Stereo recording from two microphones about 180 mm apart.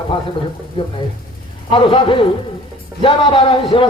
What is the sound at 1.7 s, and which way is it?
Speech, 30° left (ahead or behind).